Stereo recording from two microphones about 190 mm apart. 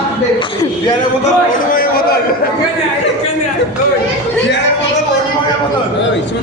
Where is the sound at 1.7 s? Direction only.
50° left (ahead or behind).